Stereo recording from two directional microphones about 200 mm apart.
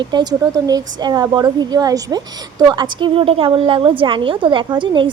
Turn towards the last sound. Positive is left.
turn(degrees=-25)  # may be behind; listen again after turning